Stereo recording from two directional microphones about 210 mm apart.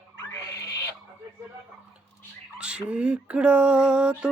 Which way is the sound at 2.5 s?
5° right (ahead or behind).